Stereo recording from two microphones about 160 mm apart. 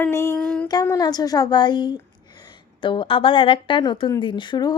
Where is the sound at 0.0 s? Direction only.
15° left (ahead or behind).